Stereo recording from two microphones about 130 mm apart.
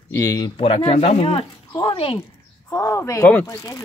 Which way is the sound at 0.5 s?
45° left (ahead or behind).